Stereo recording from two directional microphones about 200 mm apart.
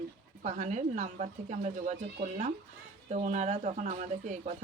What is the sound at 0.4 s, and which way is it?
Speech, 35° right (ahead or behind).